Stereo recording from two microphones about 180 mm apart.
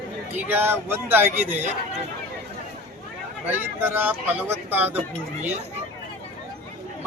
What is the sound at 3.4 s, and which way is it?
Speech, 10° right (ahead or behind).